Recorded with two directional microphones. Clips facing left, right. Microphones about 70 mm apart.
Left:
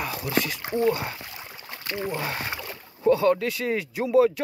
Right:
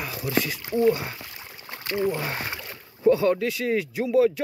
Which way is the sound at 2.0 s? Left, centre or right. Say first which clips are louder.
Right 4 dB; centre.